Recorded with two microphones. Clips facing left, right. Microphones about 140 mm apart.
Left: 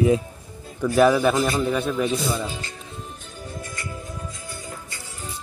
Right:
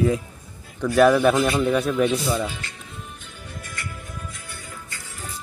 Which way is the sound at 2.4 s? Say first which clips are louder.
Right 1 dB; 35° left (ahead or behind).